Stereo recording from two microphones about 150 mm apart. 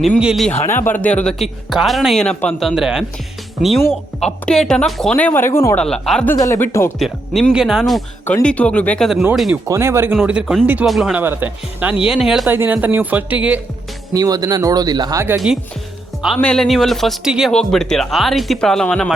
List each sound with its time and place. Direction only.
0.2 s speech: centre (ahead or behind)
0.6 s speech: 15° left (ahead or behind); by 3.1 s 5° right (ahead or behind)
4.2 s speech: 5° left (ahead or behind)
5.8 s speech: 5° left (ahead or behind)
6.3 s speech: 20° left (ahead or behind)
7.0 s speech: centre (ahead or behind)
9.3 s speech: centre (ahead or behind)
9.6 s speech: 20° right (ahead or behind)
10.2 s speech: 5° right (ahead or behind)
11.2 s speech: 15° right (ahead or behind)
12.5 s speech: 15° right (ahead or behind)
14.1 s speech: 25° right (ahead or behind)
16.2 s speech: 5° left (ahead or behind)